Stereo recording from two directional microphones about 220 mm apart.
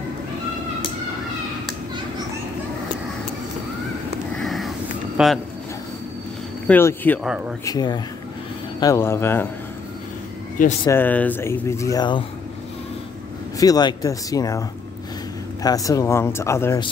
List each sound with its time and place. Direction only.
4.4 s a sound: centre (ahead or behind)
6.7 s speech: 10° left (ahead or behind)
7.2 s speech: 5° right (ahead or behind)
7.6 s speech: 20° left (ahead or behind)
10.9 s speech: 10° left (ahead or behind)
13.6 s speech: 15° left (ahead or behind)
15.6 s speech: 15° left (ahead or behind)